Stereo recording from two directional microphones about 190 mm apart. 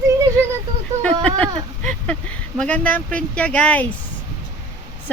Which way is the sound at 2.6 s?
5° left (ahead or behind).